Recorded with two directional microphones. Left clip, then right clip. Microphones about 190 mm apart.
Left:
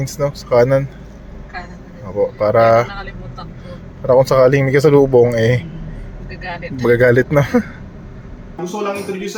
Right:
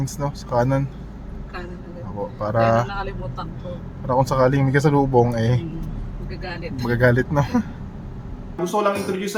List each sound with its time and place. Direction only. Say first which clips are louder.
0.0 s speech: left 8 dB; 15° left (ahead or behind)
2.4 s speech: left 7 dB; 15° left (ahead or behind)
4.1 s speech: left 8 dB; 15° left (ahead or behind)
6.8 s speech: left 8 dB; 30° left (ahead or behind)
8.6 s speech: right 1 dB; 20° right (ahead or behind)